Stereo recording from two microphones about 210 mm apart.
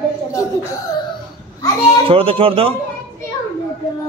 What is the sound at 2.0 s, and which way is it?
Speech, 25° right (ahead or behind).